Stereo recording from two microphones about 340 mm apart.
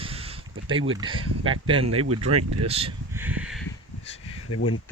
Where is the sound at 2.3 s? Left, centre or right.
Centre.